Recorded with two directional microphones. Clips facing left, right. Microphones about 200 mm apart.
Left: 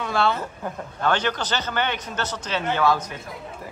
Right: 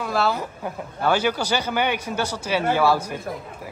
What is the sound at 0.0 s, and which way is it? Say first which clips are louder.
A man's voice: even; 5° right (ahead or behind).